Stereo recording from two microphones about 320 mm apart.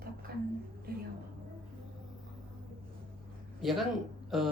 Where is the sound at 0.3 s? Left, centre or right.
Right.